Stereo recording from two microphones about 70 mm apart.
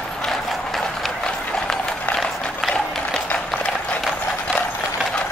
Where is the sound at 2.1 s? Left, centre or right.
Centre.